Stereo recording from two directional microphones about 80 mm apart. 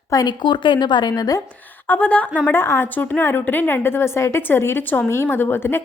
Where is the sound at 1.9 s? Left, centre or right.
Centre.